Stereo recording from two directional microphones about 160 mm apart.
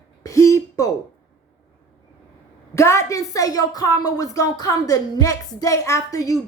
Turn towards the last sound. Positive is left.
turn(degrees=20)  # may be behind; listen again after turning